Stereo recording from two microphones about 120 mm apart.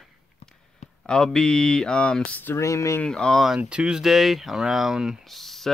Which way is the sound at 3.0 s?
5° left (ahead or behind).